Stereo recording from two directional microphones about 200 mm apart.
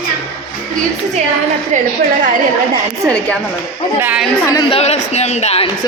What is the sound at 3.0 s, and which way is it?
A woman's voice, 15° right (ahead or behind).